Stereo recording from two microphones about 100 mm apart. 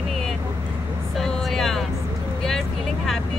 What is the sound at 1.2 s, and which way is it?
Vehicle, 5° left (ahead or behind).